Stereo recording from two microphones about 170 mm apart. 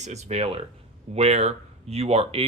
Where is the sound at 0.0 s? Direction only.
40° right (ahead or behind).